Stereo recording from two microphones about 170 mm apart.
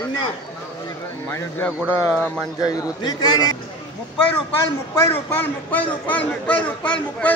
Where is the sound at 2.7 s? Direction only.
20° left (ahead or behind).